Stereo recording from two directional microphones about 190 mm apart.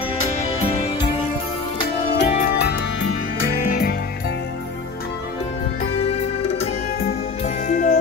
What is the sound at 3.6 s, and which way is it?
Music, 45° left (ahead or behind).